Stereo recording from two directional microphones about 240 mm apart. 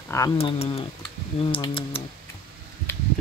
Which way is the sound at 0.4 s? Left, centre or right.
Left.